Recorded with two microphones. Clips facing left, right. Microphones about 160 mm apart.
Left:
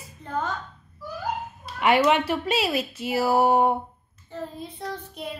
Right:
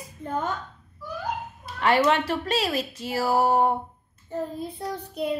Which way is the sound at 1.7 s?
10° left (ahead or behind).